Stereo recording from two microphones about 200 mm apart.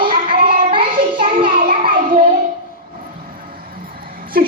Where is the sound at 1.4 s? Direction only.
45° right (ahead or behind).